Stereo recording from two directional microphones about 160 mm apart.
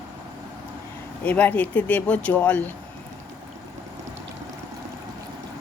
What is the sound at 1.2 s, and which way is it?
Speech, 10° left (ahead or behind).